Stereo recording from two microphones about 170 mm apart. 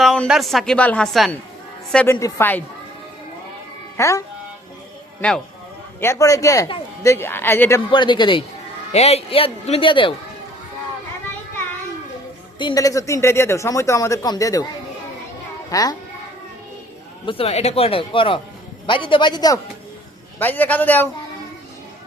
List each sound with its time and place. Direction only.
0.0 s a woman's voice: centre (ahead or behind)
3.9 s speech: 15° left (ahead or behind)
6.0 s speech: 15° left (ahead or behind)
7.9 s a man's voice: 30° left (ahead or behind)
12.5 s speech: 25° left (ahead or behind)
15.7 s speech: 20° left (ahead or behind)
17.2 s a man's voice: 35° left (ahead or behind)
20.4 s speech: 10° left (ahead or behind)